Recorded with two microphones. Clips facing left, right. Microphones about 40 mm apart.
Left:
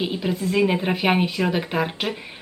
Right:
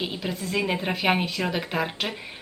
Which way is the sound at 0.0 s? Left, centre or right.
Centre.